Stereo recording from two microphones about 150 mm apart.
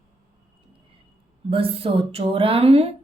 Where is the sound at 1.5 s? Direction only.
40° right (ahead or behind).